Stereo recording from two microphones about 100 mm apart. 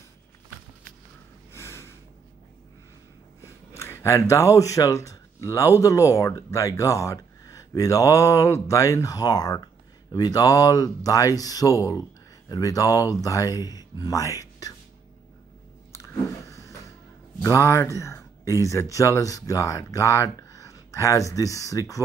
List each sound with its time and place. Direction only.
1.5 s snort: 25° left (ahead or behind)
3.7 s speech: 25° left (ahead or behind)
15.9 s chewing: 30° left (ahead or behind)
17.4 s speech: 30° left (ahead or behind)